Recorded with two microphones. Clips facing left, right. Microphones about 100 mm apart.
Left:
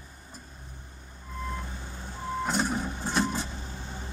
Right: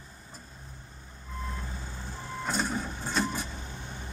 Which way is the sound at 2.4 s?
15° left (ahead or behind).